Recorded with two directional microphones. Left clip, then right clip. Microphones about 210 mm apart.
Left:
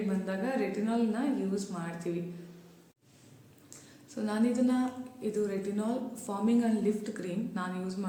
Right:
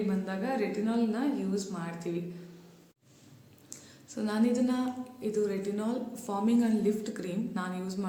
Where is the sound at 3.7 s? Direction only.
10° right (ahead or behind).